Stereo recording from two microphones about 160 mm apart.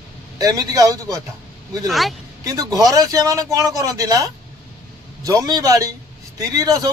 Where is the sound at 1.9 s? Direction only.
Centre (ahead or behind).